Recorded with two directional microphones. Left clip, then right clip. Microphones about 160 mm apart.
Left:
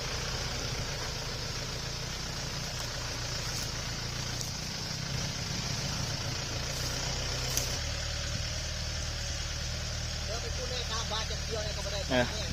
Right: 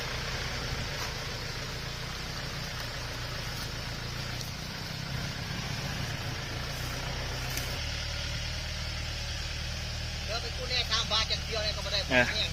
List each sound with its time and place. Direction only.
12.1 s speech: 15° left (ahead or behind)